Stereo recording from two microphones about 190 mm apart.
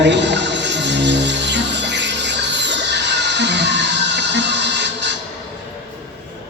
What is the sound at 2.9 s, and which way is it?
Music, 65° right (ahead or behind).